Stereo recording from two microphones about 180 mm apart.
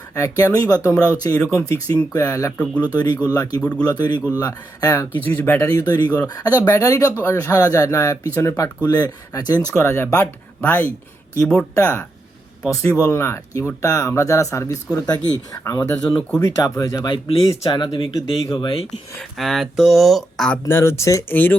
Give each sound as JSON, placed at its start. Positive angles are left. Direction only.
{"t": 0.1, "sound": "speech", "side_deg": 20}
{"t": 1.3, "sound": "speech", "side_deg": 5}
{"t": 1.6, "sound": "speech", "side_deg": 15}
{"t": 5.4, "sound": "speech", "side_deg": 10}
{"t": 19.4, "sound": "speech", "side_deg": 0}
{"t": 20.7, "sound": "speech", "side_deg": 15}